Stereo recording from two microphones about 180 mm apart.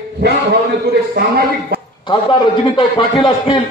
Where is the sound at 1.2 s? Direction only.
65° right (ahead or behind).